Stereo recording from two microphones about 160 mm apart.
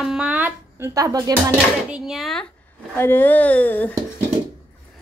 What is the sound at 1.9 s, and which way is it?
Speech, centre (ahead or behind).